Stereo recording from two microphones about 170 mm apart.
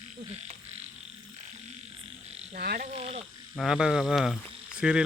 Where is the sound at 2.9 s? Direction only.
35° right (ahead or behind).